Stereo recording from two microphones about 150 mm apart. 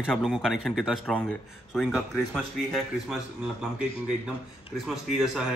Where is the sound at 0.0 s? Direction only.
5° right (ahead or behind).